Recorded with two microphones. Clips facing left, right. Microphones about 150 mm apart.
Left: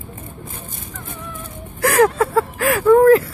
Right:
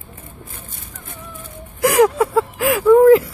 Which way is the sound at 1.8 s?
15° right (ahead or behind).